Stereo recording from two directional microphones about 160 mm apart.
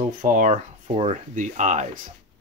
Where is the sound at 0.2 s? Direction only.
55° right (ahead or behind).